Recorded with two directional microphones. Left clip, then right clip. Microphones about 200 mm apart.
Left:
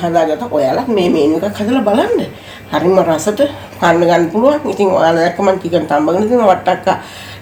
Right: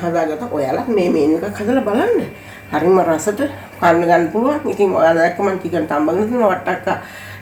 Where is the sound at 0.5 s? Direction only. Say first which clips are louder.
Left 7 dB; 50° left (ahead or behind).